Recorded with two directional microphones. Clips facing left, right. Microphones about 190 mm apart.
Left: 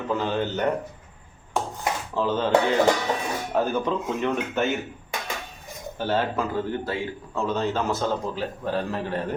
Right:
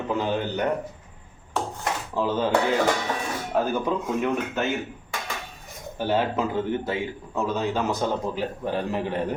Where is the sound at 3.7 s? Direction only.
10° right (ahead or behind).